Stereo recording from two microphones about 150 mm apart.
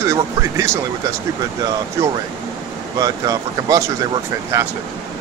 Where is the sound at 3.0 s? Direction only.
25° right (ahead or behind).